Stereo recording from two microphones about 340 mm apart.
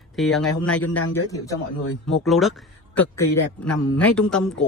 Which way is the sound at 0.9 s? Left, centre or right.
Left.